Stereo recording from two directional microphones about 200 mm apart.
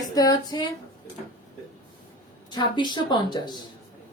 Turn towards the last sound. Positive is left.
turn(degrees=20)  # may be behind; listen again after turning